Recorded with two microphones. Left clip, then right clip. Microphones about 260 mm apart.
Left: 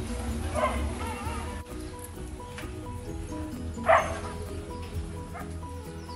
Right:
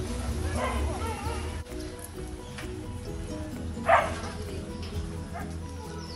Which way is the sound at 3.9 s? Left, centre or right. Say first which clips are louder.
Even; centre.